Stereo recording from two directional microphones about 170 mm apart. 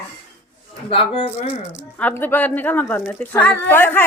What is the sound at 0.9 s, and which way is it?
Speech, 30° left (ahead or behind).